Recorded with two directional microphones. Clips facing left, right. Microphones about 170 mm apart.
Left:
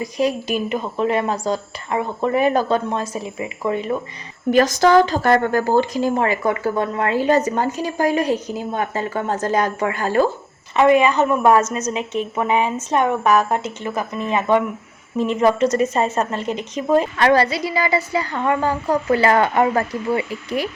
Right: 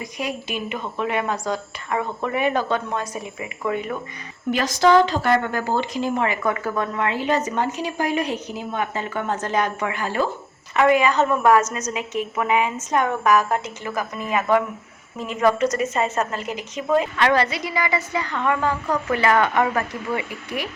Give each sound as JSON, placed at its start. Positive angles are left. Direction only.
{"t": 0.0, "sound": "speech", "side_deg": 35}
{"t": 4.5, "sound": "speech", "side_deg": 45}
{"t": 10.8, "sound": "a woman's voice", "side_deg": 25}